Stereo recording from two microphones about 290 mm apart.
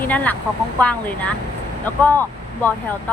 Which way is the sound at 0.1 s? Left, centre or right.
Centre.